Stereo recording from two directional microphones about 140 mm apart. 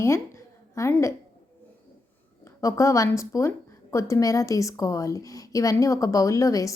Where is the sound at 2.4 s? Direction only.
20° left (ahead or behind).